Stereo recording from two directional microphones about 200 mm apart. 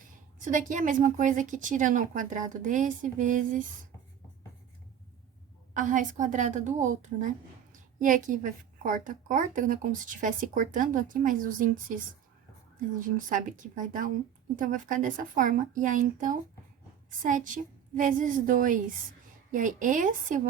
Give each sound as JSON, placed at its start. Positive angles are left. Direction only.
{"t": 0.3, "sound": "a woman's voice", "side_deg": -40}
{"t": 5.7, "sound": "a woman's voice", "side_deg": -40}
{"t": 13.0, "sound": "a woman's voice", "side_deg": -40}